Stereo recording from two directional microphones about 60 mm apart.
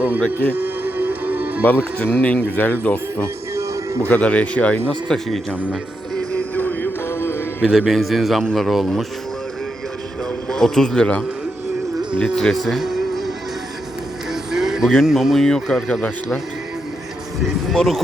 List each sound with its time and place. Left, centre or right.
0.5 s music: right
1.6 s speech: left
3.5 s music: right
4.1 s speech: left
4.9 s speech: centre
6.3 s music: left
7.1 s music: left
7.7 s a man's voice: centre
10.5 s speech: centre
12.2 s speech: centre
12.5 s music: centre
14.5 s speech: centre
15.4 s speech: centre
17.4 s a man's voice: centre